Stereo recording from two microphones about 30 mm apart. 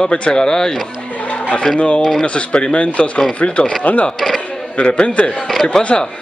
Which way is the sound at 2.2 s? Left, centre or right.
Left.